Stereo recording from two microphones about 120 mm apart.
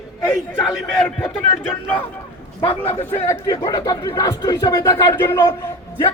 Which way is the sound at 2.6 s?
55° left (ahead or behind).